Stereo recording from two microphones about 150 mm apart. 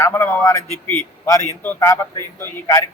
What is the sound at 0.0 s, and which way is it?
A man's voice, 15° left (ahead or behind).